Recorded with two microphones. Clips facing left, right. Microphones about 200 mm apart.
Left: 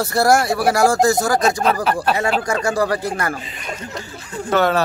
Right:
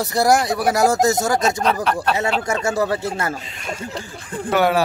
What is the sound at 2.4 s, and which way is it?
Speech, 25° right (ahead or behind).